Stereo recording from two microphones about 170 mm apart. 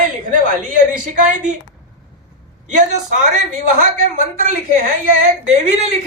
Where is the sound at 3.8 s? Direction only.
45° right (ahead or behind).